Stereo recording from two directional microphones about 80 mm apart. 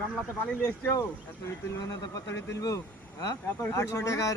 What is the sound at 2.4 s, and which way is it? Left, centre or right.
Speech, left.